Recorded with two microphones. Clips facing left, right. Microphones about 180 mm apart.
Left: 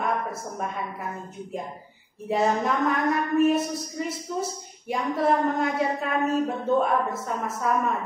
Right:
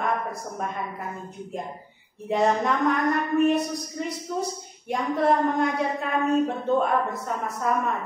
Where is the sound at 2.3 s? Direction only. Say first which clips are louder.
Right 1 dB; centre (ahead or behind).